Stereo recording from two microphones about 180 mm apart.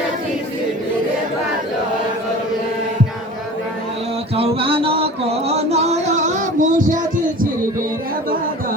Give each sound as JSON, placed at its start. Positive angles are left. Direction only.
{"t": 4.4, "sound": "music", "side_deg": -30}